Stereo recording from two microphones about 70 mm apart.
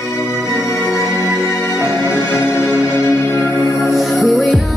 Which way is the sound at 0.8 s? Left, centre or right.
Left.